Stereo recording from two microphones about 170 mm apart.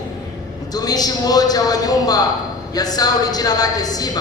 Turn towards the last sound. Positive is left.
turn(degrees=20)  # may be behind; listen again after turning